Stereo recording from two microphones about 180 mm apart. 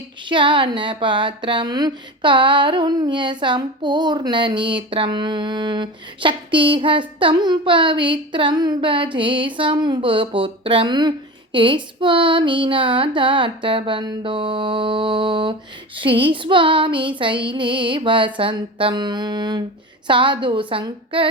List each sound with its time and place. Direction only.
0.3 s speech: 25° right (ahead or behind)